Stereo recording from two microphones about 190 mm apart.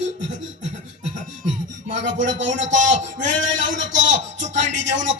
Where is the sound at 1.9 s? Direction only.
70° right (ahead or behind).